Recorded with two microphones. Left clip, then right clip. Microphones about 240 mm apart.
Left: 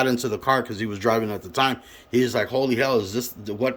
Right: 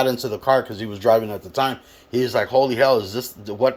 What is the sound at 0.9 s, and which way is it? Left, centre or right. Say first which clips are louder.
Speech: right 6 dB; left.